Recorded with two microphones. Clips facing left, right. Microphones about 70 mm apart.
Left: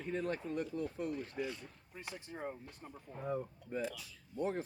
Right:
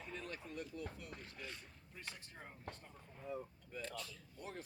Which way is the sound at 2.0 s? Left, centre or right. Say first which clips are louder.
Left 10 dB; left.